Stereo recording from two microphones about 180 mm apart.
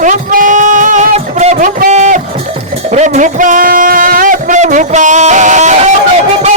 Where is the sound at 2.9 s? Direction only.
40° right (ahead or behind).